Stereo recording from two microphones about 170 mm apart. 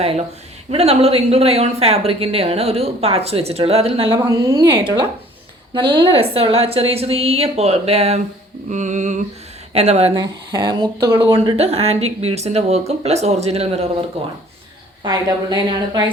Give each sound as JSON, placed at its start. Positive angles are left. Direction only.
{"t": 0.7, "sound": "speech", "side_deg": -35}
{"t": 8.7, "sound": "a sound", "side_deg": -45}
{"t": 9.7, "sound": "speech", "side_deg": -40}
{"t": 10.2, "sound": "speech", "side_deg": -25}
{"t": 15.0, "sound": "speech", "side_deg": -25}